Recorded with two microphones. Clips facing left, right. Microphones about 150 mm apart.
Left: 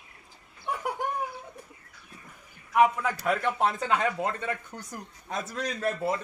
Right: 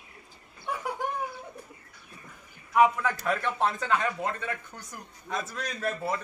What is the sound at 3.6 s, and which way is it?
Speech, 25° left (ahead or behind).